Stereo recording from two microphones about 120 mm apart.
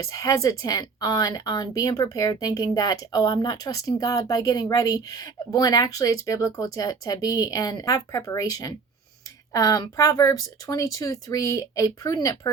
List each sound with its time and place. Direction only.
0.0 s speech: 30° left (ahead or behind)